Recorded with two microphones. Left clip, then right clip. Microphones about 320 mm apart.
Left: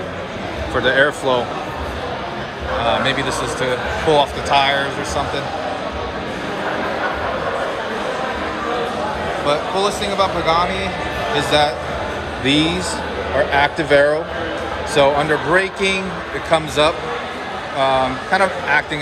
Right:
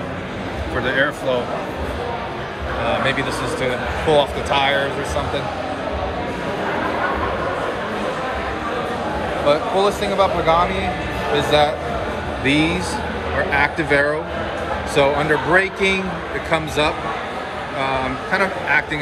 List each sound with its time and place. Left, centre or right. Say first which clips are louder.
0.8 s speech: left 4 dB; centre
4.1 s speech: left 2 dB; centre
9.5 s speech: right 2 dB; centre